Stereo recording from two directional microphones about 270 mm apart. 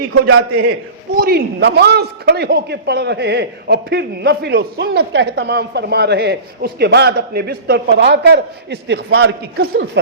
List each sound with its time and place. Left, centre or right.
0.1 s a man's voice: right
1.1 s a man's voice: right